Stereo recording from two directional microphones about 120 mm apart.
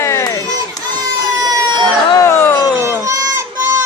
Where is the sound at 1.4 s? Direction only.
35° right (ahead or behind).